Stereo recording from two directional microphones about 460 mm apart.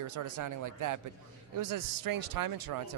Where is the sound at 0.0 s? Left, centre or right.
Right.